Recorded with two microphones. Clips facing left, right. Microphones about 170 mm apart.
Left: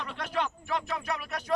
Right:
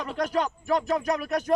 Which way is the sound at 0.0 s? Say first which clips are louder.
Right 6 dB; 40° right (ahead or behind).